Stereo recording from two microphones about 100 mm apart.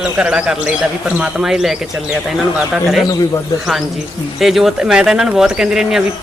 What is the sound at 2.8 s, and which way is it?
Speech, centre (ahead or behind).